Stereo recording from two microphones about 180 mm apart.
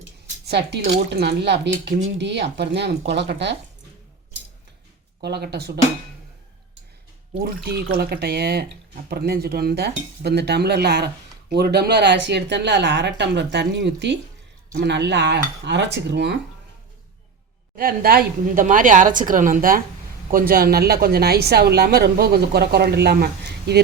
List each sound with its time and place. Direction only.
0.4 s cutlery: 70° right (ahead or behind)
5.2 s a woman's voice: 65° right (ahead or behind)
7.3 s a woman's voice: 55° right (ahead or behind)
9.0 s cutlery: 60° right (ahead or behind)
17.7 s a woman's voice: 55° right (ahead or behind)